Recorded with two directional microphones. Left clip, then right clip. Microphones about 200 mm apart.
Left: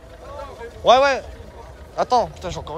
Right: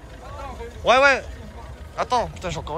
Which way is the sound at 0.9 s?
15° left (ahead or behind).